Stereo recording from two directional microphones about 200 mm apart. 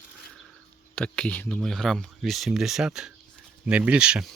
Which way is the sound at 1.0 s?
5° left (ahead or behind).